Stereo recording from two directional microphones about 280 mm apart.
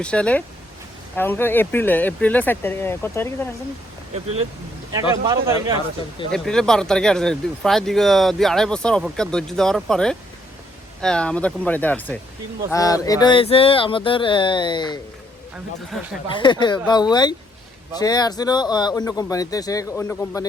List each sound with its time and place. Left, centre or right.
0.0 s speech: centre
5.1 s speech: centre
6.3 s speech: centre
16.3 s speech: centre